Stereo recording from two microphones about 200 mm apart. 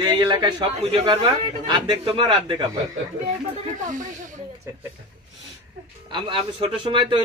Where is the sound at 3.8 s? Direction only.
40° right (ahead or behind).